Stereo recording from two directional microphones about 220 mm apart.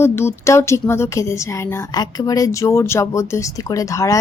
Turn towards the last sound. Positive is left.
turn(degrees=15)  # may be behind; listen again after turning